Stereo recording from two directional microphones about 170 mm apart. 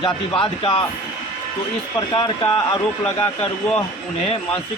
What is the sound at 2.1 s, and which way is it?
Speech, 30° left (ahead or behind).